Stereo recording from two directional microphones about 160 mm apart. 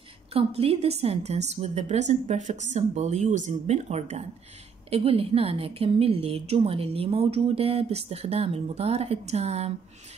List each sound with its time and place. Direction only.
0.3 s a woman's voice: 35° right (ahead or behind)